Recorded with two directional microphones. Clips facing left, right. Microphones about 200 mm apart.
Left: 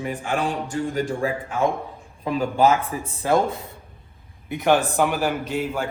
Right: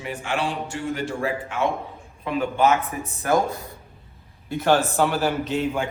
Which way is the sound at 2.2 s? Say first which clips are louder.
Left 2 dB; 35° left (ahead or behind).